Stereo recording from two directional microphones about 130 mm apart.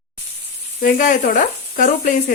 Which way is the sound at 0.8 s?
90° left.